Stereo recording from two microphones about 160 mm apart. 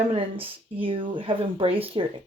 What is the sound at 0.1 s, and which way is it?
Speech, 35° right (ahead or behind).